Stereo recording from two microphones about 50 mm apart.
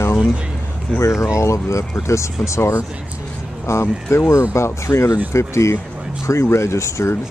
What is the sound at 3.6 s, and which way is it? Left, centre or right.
Speech, left.